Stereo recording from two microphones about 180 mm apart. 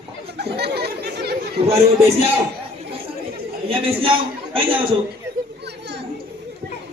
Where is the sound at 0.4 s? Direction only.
65° right (ahead or behind).